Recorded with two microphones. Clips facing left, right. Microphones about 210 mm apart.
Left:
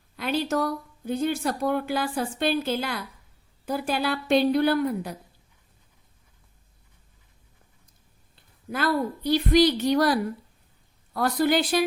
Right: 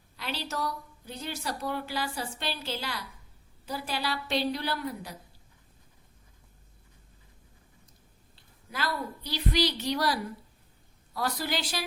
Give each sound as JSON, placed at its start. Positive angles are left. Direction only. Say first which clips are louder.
{"t": 0.2, "sound": "a woman's voice", "louder": "left 9 dB", "side_deg": 50}
{"t": 8.7, "sound": "a woman's voice", "louder": "left 9 dB", "side_deg": 50}